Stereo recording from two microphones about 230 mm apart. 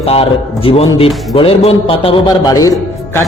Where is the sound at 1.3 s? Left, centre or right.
Left.